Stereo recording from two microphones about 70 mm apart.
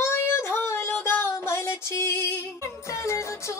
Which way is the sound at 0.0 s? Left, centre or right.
Left.